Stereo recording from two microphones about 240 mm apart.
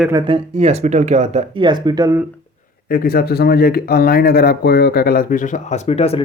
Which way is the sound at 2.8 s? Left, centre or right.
Left.